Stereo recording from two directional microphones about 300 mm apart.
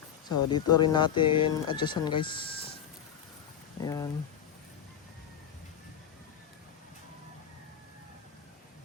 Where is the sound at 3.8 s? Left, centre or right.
Centre.